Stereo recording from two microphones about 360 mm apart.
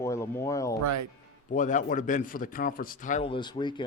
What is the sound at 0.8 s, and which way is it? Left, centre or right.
Speech, right.